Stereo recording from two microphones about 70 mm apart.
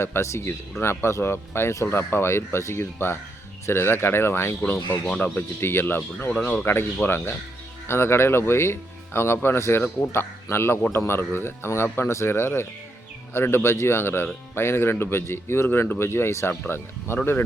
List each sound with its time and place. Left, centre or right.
0.0 s speech: left
5.0 s speech: centre
5.5 s speech: left